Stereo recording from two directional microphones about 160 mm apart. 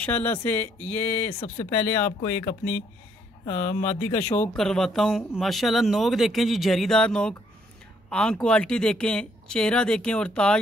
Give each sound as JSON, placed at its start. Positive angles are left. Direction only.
{"t": 0.0, "sound": "speech", "side_deg": 10}
{"t": 1.4, "sound": "speech", "side_deg": 40}
{"t": 2.3, "sound": "speech", "side_deg": 10}
{"t": 3.4, "sound": "speech", "side_deg": 45}
{"t": 4.2, "sound": "speech", "side_deg": 15}
{"t": 4.6, "sound": "speech", "side_deg": 5}